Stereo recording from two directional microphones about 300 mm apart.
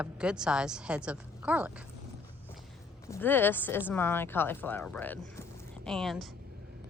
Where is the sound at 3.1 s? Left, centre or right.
Centre.